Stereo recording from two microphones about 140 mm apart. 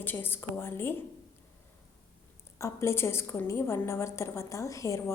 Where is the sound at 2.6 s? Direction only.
20° left (ahead or behind).